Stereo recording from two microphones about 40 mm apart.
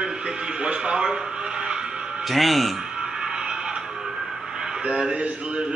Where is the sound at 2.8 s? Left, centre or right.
Centre.